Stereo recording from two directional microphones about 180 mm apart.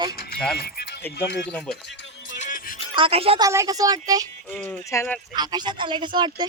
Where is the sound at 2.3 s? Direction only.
45° left (ahead or behind).